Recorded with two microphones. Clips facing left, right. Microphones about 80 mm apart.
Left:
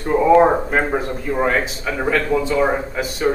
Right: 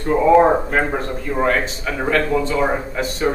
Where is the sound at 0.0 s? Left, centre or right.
Centre.